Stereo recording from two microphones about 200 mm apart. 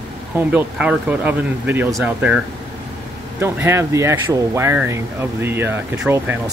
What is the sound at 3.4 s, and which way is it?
Speech, 10° right (ahead or behind).